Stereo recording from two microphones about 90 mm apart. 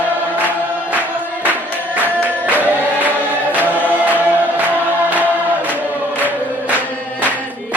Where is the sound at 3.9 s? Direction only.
20° right (ahead or behind).